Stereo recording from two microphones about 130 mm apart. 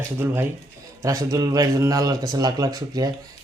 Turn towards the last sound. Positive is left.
turn(degrees=-30)  # may be behind; listen again after turning